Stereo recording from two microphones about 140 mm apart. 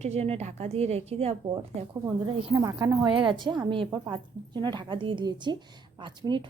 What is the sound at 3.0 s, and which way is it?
A woman's voice, 35° right (ahead or behind).